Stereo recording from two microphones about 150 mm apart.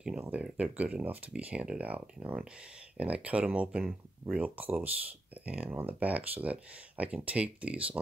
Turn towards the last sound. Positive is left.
turn(degrees=-10)  # may be behind; listen again after turning